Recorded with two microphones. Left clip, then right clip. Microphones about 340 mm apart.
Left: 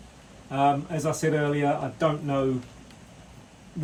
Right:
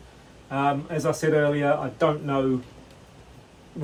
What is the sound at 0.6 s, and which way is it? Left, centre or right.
Speech, centre.